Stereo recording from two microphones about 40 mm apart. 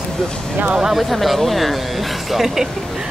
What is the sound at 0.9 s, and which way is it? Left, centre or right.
Speech, centre.